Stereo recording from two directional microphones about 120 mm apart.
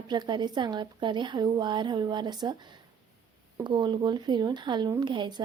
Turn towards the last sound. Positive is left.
turn(degrees=-40)  # may be behind; listen again after turning